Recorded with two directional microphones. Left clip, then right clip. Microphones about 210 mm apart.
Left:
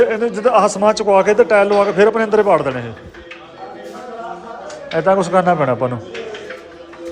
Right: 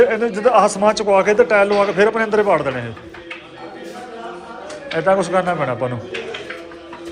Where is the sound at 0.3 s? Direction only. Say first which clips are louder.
Even; 20° left (ahead or behind).